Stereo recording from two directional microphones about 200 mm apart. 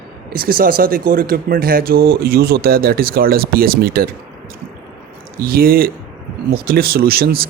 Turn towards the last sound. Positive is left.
turn(degrees=-50)  # may be behind; listen again after turning